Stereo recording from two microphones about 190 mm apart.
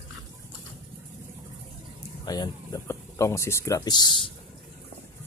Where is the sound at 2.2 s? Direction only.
20° left (ahead or behind).